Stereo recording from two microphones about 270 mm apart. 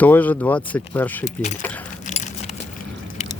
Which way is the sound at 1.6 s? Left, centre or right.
Centre.